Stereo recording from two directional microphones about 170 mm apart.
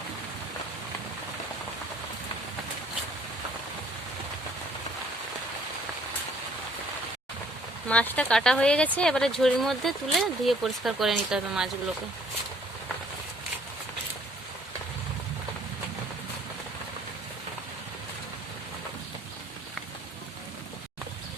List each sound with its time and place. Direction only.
7.9 s speech: 5° left (ahead or behind)